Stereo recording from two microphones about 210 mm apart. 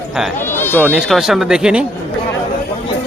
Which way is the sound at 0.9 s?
5° right (ahead or behind).